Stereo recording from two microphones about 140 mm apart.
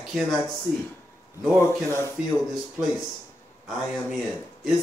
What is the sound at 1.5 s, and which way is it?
Speech, 20° left (ahead or behind).